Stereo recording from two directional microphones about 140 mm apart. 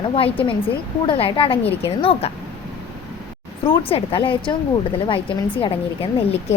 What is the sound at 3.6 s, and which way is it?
Speech, 40° left (ahead or behind).